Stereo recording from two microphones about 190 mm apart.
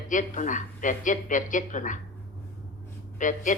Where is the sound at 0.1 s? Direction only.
40° left (ahead or behind).